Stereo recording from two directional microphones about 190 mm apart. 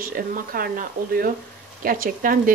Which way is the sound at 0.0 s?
50° right (ahead or behind).